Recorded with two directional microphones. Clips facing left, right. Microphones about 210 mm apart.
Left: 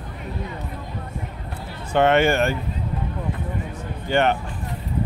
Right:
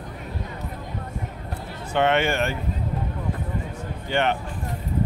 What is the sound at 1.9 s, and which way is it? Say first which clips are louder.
Speech: left 4 dB; 45° left (ahead or behind).